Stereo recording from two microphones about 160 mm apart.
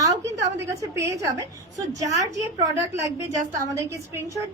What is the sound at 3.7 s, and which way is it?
Speech, 20° right (ahead or behind).